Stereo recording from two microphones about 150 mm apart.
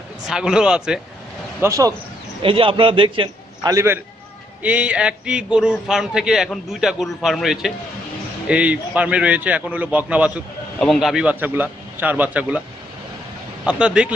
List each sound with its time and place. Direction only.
0.3 s a man's voice: 5° right (ahead or behind)
1.6 s speech: 20° right (ahead or behind)
2.4 s a man's voice: 35° right (ahead or behind)
3.6 s a man's voice: 20° right (ahead or behind)
13.7 s a man's voice: 5° right (ahead or behind)